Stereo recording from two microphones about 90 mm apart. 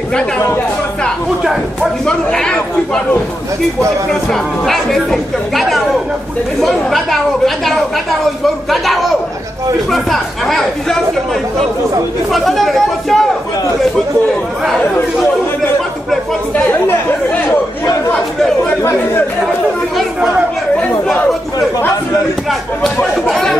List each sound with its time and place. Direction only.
1.4 s speech: 5° right (ahead or behind)
2.0 s speech: 10° left (ahead or behind)
4.1 s speech: 5° left (ahead or behind)
12.3 s speech: centre (ahead or behind)
18.8 s speech: 30° left (ahead or behind)
21.5 s speech: 40° left (ahead or behind)
23.2 s speech: centre (ahead or behind)